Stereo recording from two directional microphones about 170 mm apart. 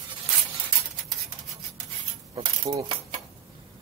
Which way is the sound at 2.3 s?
30° right (ahead or behind).